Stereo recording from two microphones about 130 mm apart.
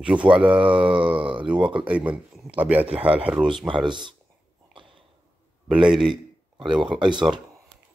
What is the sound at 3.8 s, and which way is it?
Speech, 35° right (ahead or behind).